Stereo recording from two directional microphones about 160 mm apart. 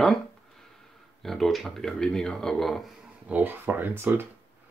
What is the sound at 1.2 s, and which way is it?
Speech, centre (ahead or behind).